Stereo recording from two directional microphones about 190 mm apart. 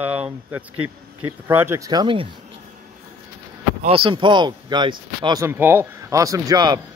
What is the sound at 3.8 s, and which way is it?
Speech, 30° right (ahead or behind).